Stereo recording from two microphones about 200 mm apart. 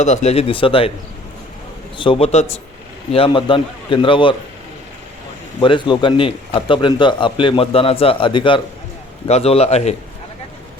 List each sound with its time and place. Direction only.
0.0 s a man's voice: 35° left (ahead or behind)
2.0 s a man's voice: 25° left (ahead or behind)
5.5 s a man's voice: 25° left (ahead or behind)